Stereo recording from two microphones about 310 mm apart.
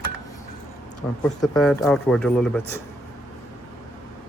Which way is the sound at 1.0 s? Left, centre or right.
Centre.